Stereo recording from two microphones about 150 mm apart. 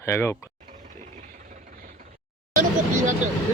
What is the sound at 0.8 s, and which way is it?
Vehicle, 55° right (ahead or behind).